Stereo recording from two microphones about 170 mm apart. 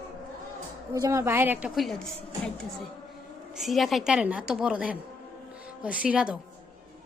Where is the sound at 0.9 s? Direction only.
20° right (ahead or behind); by 2.5 s 5° left (ahead or behind).